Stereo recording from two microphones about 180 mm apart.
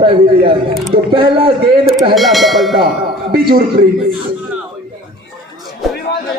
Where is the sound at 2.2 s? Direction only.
Centre (ahead or behind).